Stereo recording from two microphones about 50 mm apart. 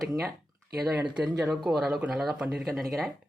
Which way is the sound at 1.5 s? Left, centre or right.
Centre.